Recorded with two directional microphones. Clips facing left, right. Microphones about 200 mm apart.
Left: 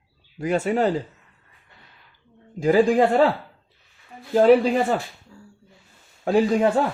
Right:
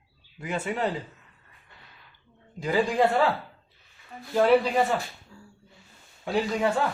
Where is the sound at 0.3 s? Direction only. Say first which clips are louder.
Left 8 dB; 45° left (ahead or behind).